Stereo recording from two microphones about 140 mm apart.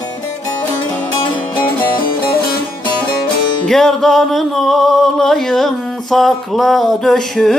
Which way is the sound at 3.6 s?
5° left (ahead or behind).